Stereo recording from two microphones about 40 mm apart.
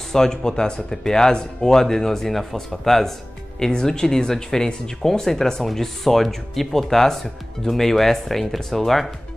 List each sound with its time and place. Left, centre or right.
0.1 s speech: centre